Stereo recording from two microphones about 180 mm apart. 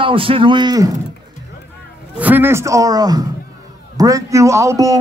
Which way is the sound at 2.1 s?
10° right (ahead or behind).